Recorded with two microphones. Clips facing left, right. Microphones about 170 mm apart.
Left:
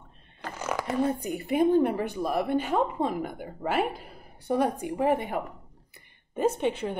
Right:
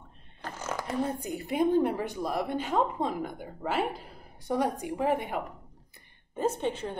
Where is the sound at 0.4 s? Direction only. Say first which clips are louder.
Left 4 dB; 65° left (ahead or behind).